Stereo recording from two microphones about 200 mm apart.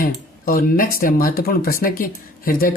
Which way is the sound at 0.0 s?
45° left (ahead or behind).